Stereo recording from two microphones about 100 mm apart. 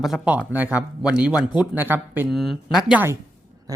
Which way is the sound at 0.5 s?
15° right (ahead or behind).